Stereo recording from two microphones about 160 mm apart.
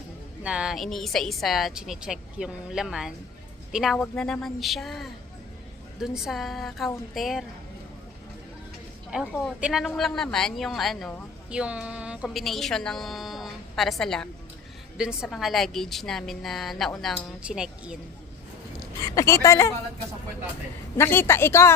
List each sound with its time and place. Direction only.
0.4 s a woman's voice: 5° right (ahead or behind)
9.0 s a woman's voice: 5° right (ahead or behind)
19.0 s speech: 20° left (ahead or behind)
21.0 s a woman's voice: 15° left (ahead or behind)